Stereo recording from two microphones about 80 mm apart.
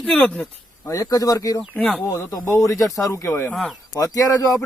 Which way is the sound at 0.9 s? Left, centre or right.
Left.